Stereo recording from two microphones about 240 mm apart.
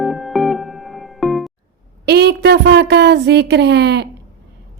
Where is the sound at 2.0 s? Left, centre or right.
Right.